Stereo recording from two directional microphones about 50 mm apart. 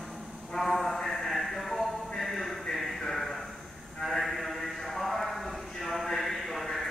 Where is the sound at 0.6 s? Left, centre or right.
Centre.